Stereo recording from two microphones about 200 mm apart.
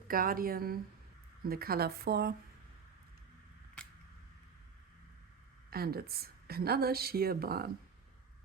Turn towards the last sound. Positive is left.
turn(degrees=-50)  # may be behind; listen again after turning